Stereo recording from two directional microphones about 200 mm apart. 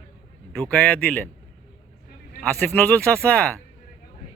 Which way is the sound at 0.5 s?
5° left (ahead or behind).